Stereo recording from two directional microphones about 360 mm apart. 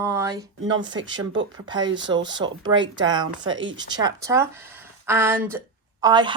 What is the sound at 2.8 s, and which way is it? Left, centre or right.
Speech, right.